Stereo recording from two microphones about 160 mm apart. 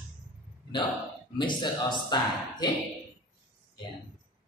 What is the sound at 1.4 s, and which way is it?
Speech, 30° left (ahead or behind).